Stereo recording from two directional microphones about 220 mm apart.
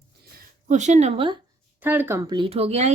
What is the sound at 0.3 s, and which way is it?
A woman's voice, 35° right (ahead or behind).